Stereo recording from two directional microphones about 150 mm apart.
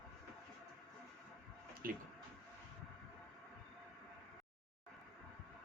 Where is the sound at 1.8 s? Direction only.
75° right (ahead or behind).